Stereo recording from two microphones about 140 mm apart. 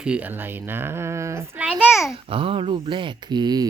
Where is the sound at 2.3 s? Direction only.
40° right (ahead or behind).